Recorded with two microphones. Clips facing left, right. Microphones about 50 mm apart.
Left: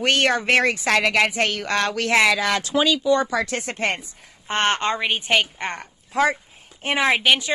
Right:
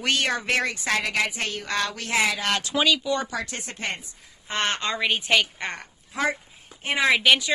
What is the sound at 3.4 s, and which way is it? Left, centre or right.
Speech, left.